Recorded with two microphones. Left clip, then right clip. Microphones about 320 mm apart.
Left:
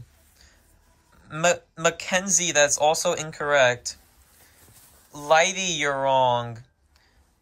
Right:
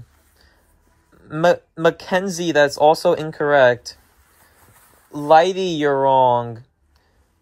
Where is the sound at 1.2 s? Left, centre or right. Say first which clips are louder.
Right 6 dB; centre.